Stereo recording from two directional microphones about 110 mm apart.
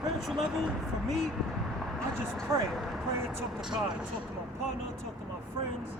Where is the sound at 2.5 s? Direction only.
25° right (ahead or behind).